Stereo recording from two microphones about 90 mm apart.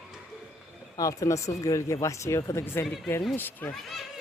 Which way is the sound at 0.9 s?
40° left (ahead or behind).